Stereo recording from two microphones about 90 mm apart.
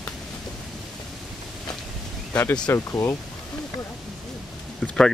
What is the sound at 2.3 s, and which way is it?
Speech, 15° left (ahead or behind).